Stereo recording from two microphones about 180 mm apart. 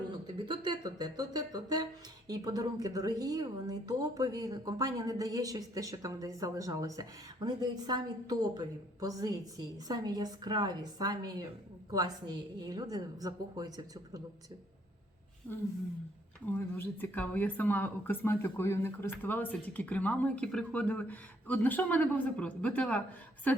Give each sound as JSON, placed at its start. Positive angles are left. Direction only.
{"t": 0.3, "sound": "speech", "side_deg": -25}
{"t": 15.5, "sound": "speech", "side_deg": 10}